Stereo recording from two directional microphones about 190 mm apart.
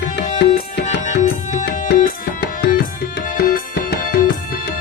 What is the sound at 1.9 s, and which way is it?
Tabla, 45° left (ahead or behind).